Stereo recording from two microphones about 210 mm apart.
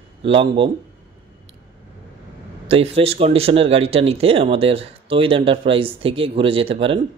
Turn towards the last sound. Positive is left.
turn(degrees=-25)  # may be behind; listen again after turning